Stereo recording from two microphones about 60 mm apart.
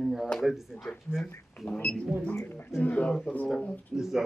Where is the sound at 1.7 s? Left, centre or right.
Centre.